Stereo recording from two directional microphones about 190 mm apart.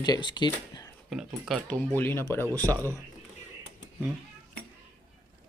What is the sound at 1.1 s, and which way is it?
Speech, centre (ahead or behind).